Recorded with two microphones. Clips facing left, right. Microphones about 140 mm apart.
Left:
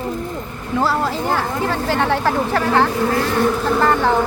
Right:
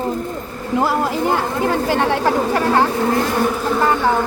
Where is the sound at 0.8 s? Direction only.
15° right (ahead or behind).